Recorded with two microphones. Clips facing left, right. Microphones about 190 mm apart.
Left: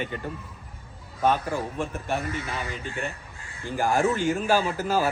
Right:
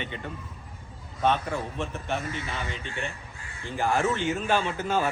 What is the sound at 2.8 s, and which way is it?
Speech, 40° left (ahead or behind).